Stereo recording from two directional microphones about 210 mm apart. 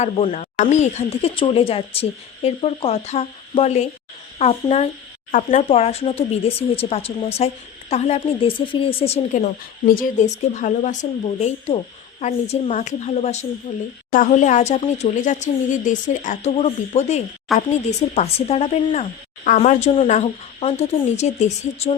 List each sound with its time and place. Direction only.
0.0 s speech: 35° left (ahead or behind)
17.5 s speech: centre (ahead or behind)
18.1 s speech: 30° left (ahead or behind)